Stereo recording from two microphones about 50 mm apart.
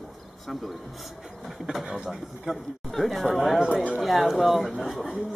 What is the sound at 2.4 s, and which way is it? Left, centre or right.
Speech, centre.